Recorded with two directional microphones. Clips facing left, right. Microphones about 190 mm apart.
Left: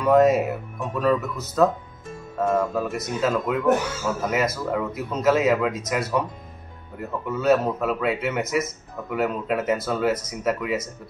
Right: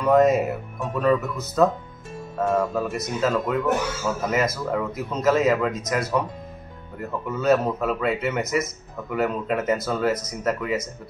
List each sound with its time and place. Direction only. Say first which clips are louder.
0.0 s speech: even; centre (ahead or behind)